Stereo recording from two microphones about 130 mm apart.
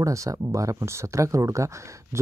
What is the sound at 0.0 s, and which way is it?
Speech, 25° right (ahead or behind).